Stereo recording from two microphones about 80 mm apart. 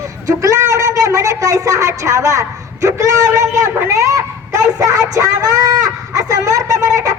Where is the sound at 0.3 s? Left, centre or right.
Right.